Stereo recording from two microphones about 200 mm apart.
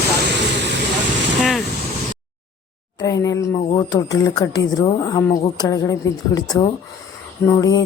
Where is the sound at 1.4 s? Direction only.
Centre (ahead or behind).